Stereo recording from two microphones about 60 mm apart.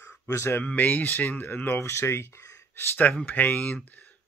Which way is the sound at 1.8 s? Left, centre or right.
Left.